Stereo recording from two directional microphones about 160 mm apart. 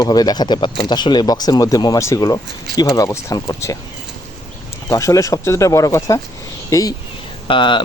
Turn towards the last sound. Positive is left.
turn(degrees=30)  # may be behind; listen again after turning